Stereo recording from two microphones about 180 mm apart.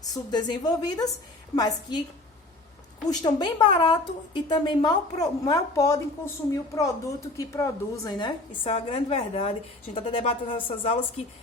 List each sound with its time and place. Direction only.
0.1 s a woman's voice: 25° left (ahead or behind)
3.1 s a woman's voice: 25° left (ahead or behind)